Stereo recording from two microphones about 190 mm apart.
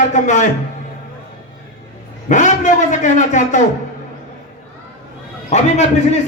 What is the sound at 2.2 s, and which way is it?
A man's voice, 40° left (ahead or behind).